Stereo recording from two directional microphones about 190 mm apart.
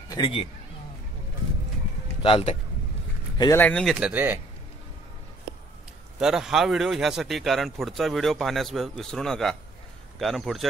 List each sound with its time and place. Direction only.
0.1 s a man's voice: 25° left (ahead or behind)
2.2 s speech: 30° left (ahead or behind)
3.3 s speech: 20° left (ahead or behind)
3.6 s a man's voice: 5° left (ahead or behind)
6.1 s a man's voice: 5° right (ahead or behind)